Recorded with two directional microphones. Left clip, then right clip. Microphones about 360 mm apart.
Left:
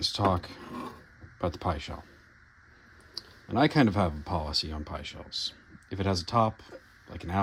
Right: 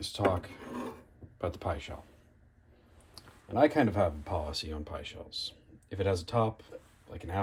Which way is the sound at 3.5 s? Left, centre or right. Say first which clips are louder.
Left 1 dB; centre.